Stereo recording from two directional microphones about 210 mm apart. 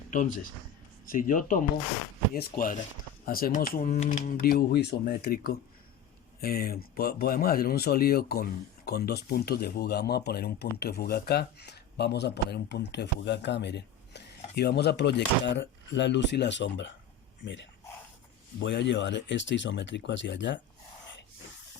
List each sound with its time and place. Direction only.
1.0 s speech: 40° left (ahead or behind); by 20.6 s 60° left (ahead or behind)